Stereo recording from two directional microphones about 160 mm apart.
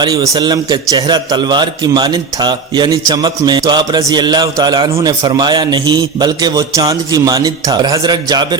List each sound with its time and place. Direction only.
0.0 s a man's voice: 25° right (ahead or behind)